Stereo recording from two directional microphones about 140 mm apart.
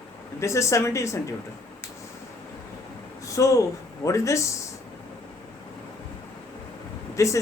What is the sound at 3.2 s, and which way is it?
Speech, 25° left (ahead or behind).